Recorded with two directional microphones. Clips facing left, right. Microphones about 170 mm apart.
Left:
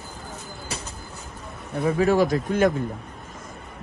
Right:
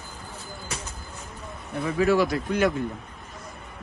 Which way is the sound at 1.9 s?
45° left (ahead or behind).